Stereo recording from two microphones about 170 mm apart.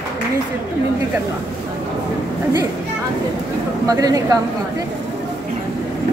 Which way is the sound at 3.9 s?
20° right (ahead or behind).